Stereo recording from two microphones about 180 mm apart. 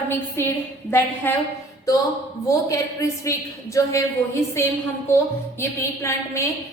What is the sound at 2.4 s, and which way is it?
A woman's voice, 15° left (ahead or behind).